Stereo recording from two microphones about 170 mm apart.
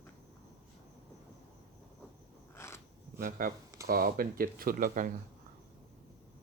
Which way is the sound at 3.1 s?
60° right (ahead or behind).